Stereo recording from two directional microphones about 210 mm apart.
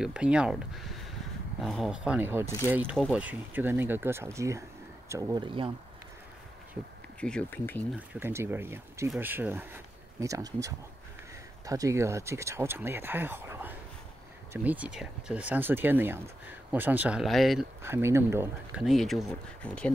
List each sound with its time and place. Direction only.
0.0 s speech: 5° right (ahead or behind); by 5.7 s 20° right (ahead or behind)
7.2 s speech: 5° left (ahead or behind)
8.1 s speech: 10° right (ahead or behind)
17.8 s speech: 10° right (ahead or behind)
18.9 s speech: centre (ahead or behind)